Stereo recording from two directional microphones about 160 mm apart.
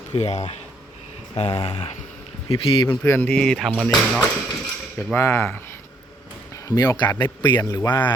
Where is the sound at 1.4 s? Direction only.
30° left (ahead or behind).